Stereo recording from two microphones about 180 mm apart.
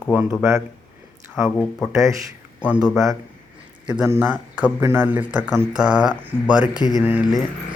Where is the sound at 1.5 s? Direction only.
10° left (ahead or behind).